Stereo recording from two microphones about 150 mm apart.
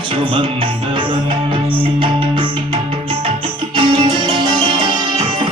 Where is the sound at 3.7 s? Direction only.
30° right (ahead or behind).